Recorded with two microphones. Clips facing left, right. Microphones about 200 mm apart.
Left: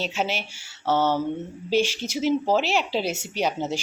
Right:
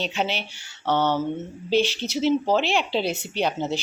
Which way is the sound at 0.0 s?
5° left (ahead or behind).